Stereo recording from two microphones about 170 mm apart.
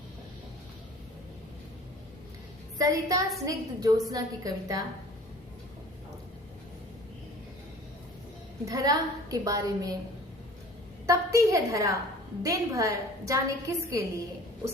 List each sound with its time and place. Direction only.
2.7 s a woman's voice: 20° right (ahead or behind)
8.6 s a woman's voice: 20° right (ahead or behind)
11.0 s a woman's voice: 20° right (ahead or behind)